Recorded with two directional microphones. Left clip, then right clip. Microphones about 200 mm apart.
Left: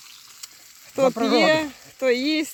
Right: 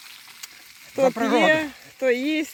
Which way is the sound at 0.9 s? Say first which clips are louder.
Left 1 dB; centre (ahead or behind).